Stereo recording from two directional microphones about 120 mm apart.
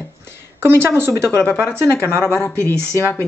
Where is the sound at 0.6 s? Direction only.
20° right (ahead or behind).